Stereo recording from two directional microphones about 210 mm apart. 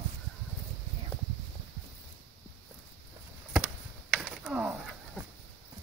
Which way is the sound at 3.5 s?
Centre (ahead or behind).